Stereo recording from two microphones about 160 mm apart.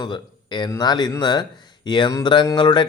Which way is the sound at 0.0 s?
30° left (ahead or behind).